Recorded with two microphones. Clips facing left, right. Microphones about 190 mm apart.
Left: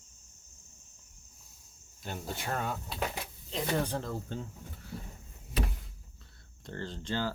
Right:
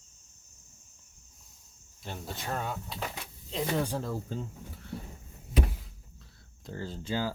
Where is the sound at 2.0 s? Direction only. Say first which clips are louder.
Left 1 dB; centre (ahead or behind).